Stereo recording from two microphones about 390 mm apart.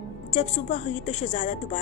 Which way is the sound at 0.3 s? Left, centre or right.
Centre.